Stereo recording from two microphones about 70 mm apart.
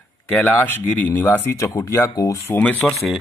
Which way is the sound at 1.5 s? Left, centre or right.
Left.